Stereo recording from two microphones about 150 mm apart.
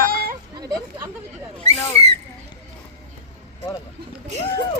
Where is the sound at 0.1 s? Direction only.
85° right.